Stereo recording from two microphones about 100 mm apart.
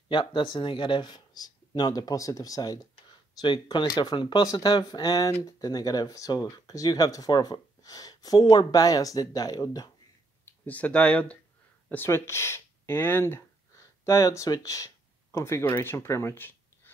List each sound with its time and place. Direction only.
0.1 s speech: 55° left (ahead or behind); by 2.8 s 35° left (ahead or behind)
3.3 s speech: 50° left (ahead or behind)
4.5 s speech: 35° left (ahead or behind)
10.6 s speech: 15° left (ahead or behind)
11.9 s speech: 25° left (ahead or behind)